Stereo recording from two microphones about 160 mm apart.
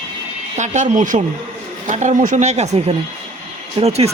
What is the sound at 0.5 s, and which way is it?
Speech, 50° right (ahead or behind).